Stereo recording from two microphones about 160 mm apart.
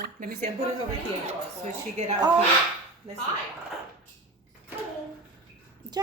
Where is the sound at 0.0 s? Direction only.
70° right (ahead or behind).